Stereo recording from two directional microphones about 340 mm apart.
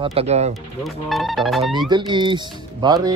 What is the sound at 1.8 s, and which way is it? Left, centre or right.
Speech, centre.